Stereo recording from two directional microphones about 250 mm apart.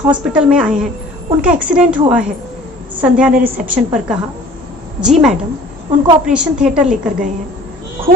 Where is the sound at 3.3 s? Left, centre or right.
Right.